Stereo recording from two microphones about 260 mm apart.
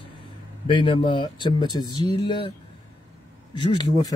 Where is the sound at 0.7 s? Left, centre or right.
Centre.